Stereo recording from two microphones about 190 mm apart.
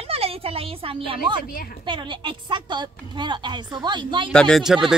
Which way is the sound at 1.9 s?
25° right (ahead or behind).